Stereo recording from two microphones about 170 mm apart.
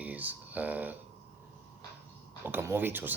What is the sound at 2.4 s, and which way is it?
Speech, 15° right (ahead or behind).